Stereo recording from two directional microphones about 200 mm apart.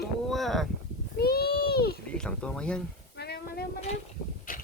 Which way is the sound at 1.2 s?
50° left (ahead or behind).